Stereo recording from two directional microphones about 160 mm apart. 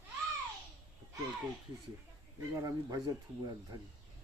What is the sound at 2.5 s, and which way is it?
Speech, 20° right (ahead or behind).